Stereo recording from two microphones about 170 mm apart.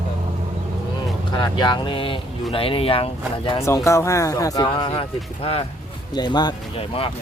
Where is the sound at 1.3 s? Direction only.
25° left (ahead or behind).